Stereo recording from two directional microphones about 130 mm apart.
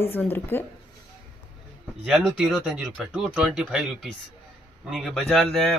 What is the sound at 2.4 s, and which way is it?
A man's voice, 5° right (ahead or behind).